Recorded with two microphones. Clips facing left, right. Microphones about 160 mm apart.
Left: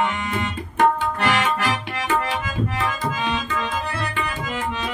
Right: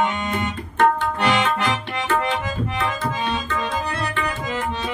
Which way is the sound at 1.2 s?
20° right (ahead or behind).